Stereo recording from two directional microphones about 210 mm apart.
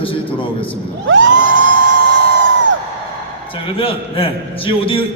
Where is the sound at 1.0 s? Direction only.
65° right (ahead or behind).